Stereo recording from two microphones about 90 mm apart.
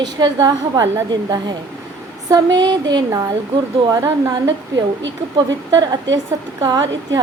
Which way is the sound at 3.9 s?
40° right (ahead or behind).